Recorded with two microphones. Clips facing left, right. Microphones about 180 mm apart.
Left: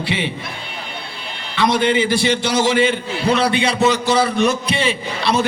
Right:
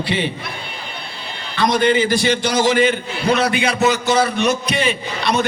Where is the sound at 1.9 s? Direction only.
25° left (ahead or behind).